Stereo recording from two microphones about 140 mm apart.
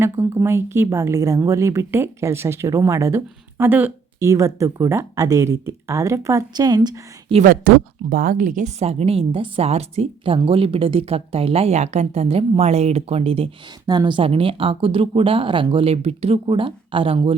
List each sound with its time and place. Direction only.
0.0 s speech: 20° right (ahead or behind)
7.4 s a woman's voice: 90° right; by 13.5 s 45° right (ahead or behind)
13.8 s speech: 30° right (ahead or behind)